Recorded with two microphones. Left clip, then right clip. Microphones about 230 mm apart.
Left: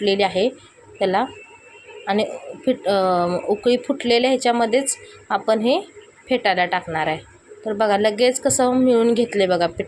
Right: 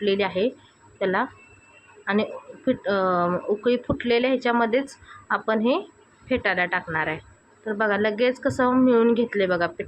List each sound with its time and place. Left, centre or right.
0.0 s a woman's voice: centre
2.6 s a woman's voice: centre